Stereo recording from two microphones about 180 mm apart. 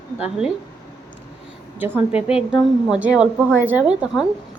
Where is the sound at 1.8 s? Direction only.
10° right (ahead or behind).